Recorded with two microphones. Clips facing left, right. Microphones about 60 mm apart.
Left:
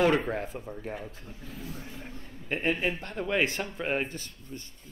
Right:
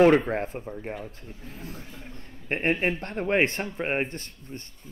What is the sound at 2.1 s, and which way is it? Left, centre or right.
A man's voice, right.